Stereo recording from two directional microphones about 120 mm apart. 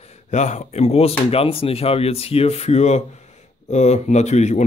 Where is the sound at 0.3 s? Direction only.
80° left.